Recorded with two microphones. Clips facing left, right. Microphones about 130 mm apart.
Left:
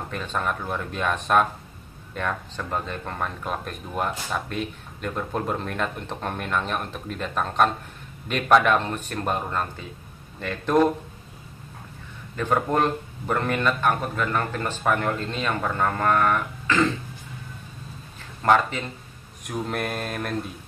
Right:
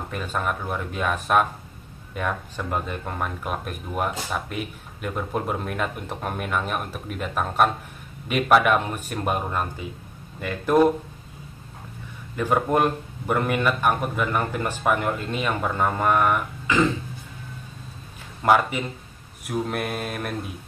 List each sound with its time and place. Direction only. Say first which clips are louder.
0.1 s speech: right 1 dB; 5° right (ahead or behind)
12.4 s speech: right 1 dB; 10° right (ahead or behind)
18.4 s speech: right 1 dB; 10° right (ahead or behind)
19.4 s mantra: right 2 dB; 5° right (ahead or behind)